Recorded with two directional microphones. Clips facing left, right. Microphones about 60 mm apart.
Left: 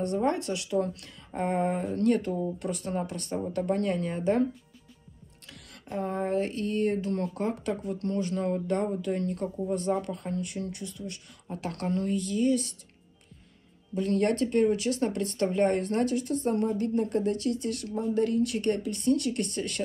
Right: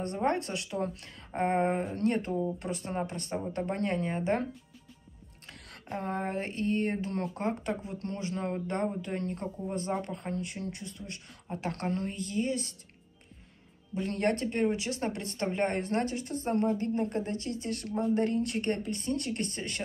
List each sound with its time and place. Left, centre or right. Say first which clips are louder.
0.0 s speech: left 3 dB; right
5.5 s music: left 2 dB; right
6.3 s a woman's voice: left 3 dB; right
11.0 s speech: left 5 dB; centre
11.4 s speech: left 1 dB; right
14.0 s a woman's voice: left 4 dB; right